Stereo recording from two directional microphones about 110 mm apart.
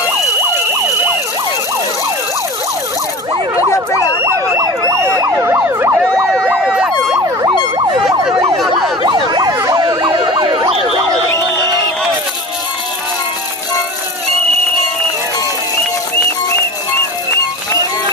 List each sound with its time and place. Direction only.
4.2 s emergency vehicle: 25° right (ahead or behind)
6.5 s emergency vehicle: 10° right (ahead or behind)
7.4 s emergency vehicle: 45° right (ahead or behind)